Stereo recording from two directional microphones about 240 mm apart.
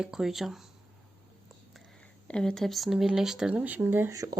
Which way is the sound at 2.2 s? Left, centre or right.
Centre.